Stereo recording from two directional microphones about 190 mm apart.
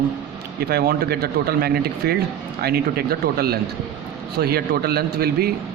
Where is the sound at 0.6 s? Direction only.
55° right (ahead or behind).